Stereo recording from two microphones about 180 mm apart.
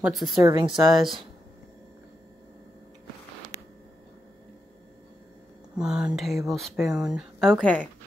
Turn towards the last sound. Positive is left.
turn(degrees=5)  # may be behind; listen again after turning